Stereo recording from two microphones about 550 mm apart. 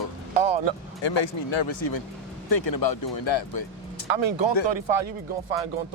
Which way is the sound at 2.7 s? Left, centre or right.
Left.